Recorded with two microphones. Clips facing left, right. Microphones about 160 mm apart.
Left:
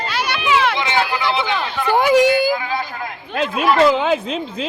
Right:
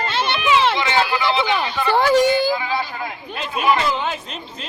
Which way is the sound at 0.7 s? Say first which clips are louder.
Even; 15° left (ahead or behind).